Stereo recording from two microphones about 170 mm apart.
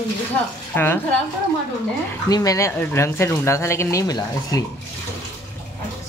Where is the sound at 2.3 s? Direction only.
20° left (ahead or behind).